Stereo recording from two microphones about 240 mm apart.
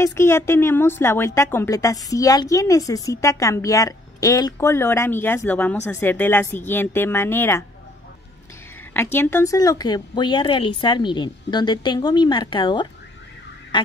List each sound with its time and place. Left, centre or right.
0.0 s a woman's voice: centre
8.9 s a woman's voice: centre
13.7 s fowl: centre